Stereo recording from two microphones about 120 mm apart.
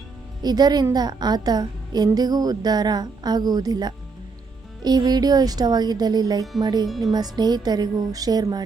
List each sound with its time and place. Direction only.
0.4 s speech: 35° right (ahead or behind)
6.8 s speech: centre (ahead or behind)
7.1 s speech: 35° right (ahead or behind)